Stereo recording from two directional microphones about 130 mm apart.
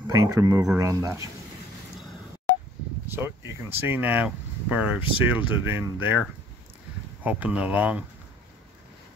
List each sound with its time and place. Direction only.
0.1 s speech: 25° right (ahead or behind)
3.1 s speech: 15° right (ahead or behind)
7.2 s speech: 10° right (ahead or behind)